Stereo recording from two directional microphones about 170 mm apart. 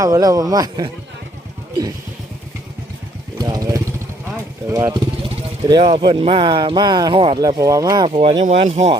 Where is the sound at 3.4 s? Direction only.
20° right (ahead or behind).